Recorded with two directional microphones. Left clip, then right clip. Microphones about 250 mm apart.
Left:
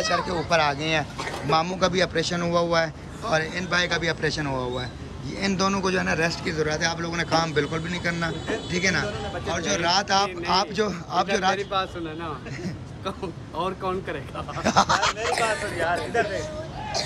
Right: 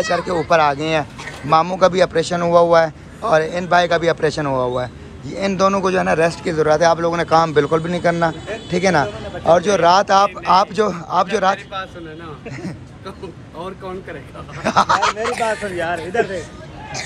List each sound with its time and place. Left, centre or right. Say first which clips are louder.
0.2 s a man's voice: right 7 dB; centre
11.5 s a man's voice: even; left
14.6 s speech: right 6 dB; centre
15.3 s a man's voice: right 4 dB; left
15.8 s speech: right 4 dB; right